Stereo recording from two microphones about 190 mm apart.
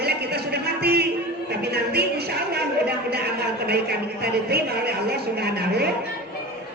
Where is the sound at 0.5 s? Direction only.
55° right (ahead or behind).